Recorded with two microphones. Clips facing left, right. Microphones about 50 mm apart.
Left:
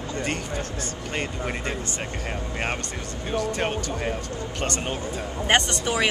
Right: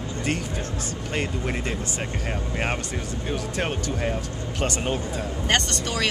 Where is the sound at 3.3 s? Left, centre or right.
Centre.